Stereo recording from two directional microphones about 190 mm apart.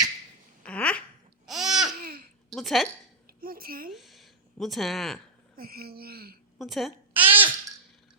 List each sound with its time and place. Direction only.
0.6 s fart: 5° left (ahead or behind)
1.5 s babbling: centre (ahead or behind)
2.0 s babbling: 50° right (ahead or behind)
2.5 s a woman's voice: centre (ahead or behind)
3.2 s a sound: 50° right (ahead or behind)
3.8 s speech: centre (ahead or behind)
5.5 s speech: 55° right (ahead or behind)
6.6 s a woman's voice: centre (ahead or behind)
7.1 s babbling: 10° right (ahead or behind)